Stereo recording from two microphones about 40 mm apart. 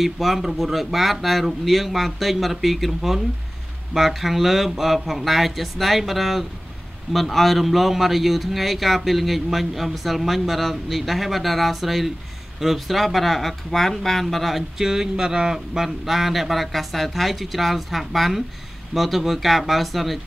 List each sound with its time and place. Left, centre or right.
0.0 s a man's voice: centre
14.8 s a man's voice: centre